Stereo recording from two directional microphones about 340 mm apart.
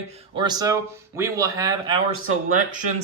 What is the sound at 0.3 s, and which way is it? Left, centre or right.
Speech, centre.